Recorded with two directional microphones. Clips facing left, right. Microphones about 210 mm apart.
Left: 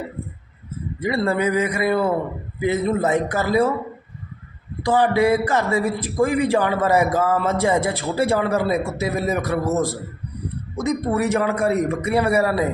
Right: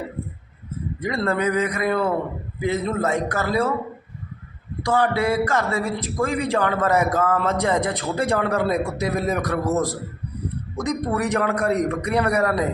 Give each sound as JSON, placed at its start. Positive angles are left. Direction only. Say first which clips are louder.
{"t": 1.0, "sound": "a man's voice", "louder": "left 2 dB", "side_deg": 5}
{"t": 4.9, "sound": "a man's voice", "louder": "left 4 dB", "side_deg": 15}